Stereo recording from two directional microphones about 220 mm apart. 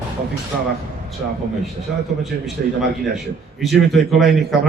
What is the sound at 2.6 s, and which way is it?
Speech, 45° right (ahead or behind).